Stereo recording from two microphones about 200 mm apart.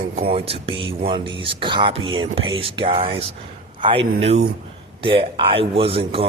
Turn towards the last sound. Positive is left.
turn(degrees=-30)  # may be behind; listen again after turning